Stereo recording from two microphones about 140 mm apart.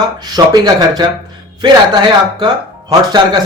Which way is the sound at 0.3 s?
30° right (ahead or behind).